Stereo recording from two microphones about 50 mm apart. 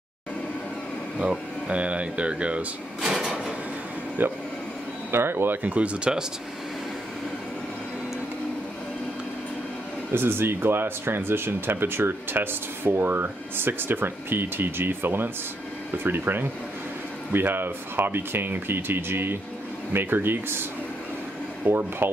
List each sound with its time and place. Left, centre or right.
1.1 s speech: right
3.1 s a sound: centre
4.2 s speech: right
5.6 s speech: right
10.1 s speech: right
21.6 s speech: right